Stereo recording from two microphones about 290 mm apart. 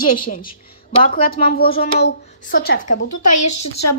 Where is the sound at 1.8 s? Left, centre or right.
Left.